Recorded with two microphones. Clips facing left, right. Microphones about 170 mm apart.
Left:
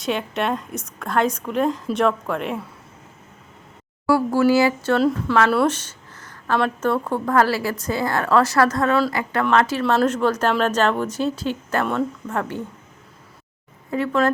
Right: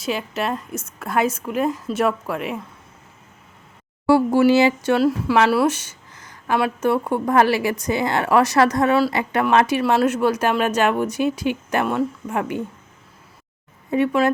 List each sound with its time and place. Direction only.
0.0 s a woman's voice: centre (ahead or behind)
4.0 s speech: 20° right (ahead or behind)
4.9 s a woman's voice: 5° right (ahead or behind)
5.5 s a sound: 5° right (ahead or behind)
6.6 s speech: 10° right (ahead or behind)
13.9 s speech: 20° right (ahead or behind)